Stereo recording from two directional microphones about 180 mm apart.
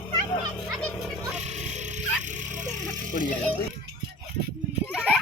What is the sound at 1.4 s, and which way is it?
Music, 40° right (ahead or behind).